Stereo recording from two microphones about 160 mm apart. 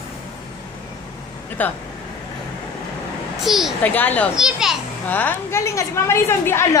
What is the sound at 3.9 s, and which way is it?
Speech, 10° left (ahead or behind).